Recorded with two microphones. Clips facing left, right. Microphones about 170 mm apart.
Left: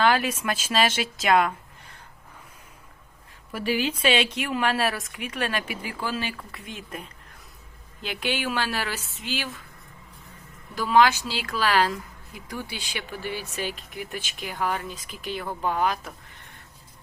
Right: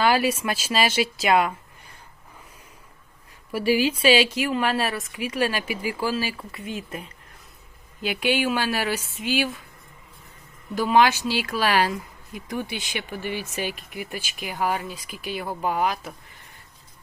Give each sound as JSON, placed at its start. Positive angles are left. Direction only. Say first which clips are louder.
{"t": 0.0, "sound": "speech", "louder": "right 2 dB", "side_deg": -10}
{"t": 3.5, "sound": "speech", "louder": "right 5 dB", "side_deg": -10}
{"t": 10.8, "sound": "speech", "louder": "right 1 dB", "side_deg": -15}